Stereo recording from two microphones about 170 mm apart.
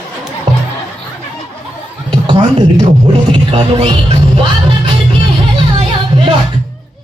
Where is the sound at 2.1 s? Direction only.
30° right (ahead or behind).